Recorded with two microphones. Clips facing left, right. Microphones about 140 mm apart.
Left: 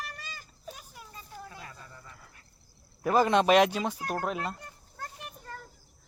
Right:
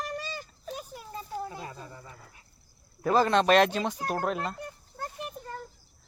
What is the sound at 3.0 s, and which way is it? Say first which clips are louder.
Speech: even; 15° left (ahead or behind).